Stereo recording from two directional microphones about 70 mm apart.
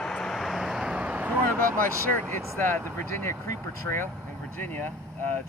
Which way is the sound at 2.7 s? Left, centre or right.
Left.